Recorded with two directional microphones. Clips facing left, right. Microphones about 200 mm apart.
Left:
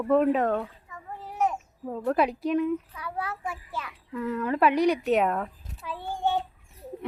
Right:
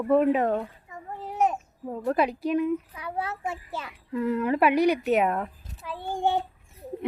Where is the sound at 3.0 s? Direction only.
25° right (ahead or behind).